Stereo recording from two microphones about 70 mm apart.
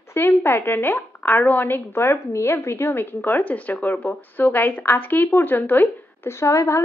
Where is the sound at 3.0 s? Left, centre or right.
Left.